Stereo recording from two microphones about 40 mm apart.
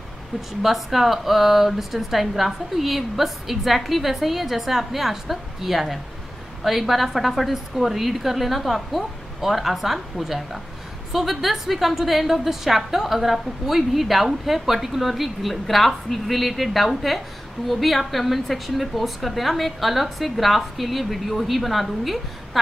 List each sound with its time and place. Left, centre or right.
0.6 s speech: centre